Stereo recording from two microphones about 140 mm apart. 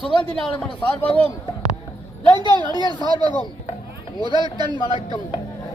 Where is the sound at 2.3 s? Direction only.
35° right (ahead or behind).